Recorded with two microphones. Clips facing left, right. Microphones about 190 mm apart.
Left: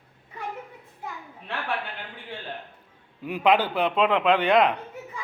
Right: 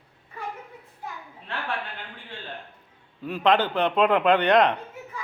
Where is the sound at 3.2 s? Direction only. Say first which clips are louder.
Even; 10° left (ahead or behind).